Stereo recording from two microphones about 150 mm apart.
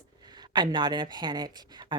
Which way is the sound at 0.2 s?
30° right (ahead or behind).